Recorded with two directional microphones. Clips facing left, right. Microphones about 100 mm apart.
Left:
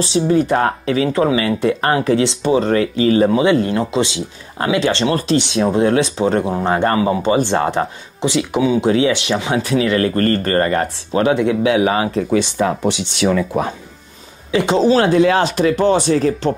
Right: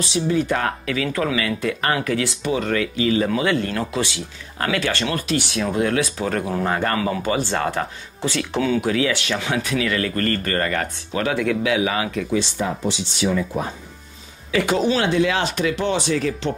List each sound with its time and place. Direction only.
0.0 s speech: 35° left (ahead or behind); by 8.8 s 15° left (ahead or behind)
8.8 s speech: 25° left (ahead or behind)
12.5 s speech: 70° left (ahead or behind)
14.5 s speech: 25° left (ahead or behind)